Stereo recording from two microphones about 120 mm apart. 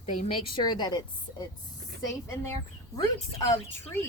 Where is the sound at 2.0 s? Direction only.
25° left (ahead or behind).